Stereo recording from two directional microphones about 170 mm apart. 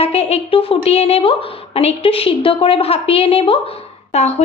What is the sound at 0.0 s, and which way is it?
A woman's voice, 35° left (ahead or behind).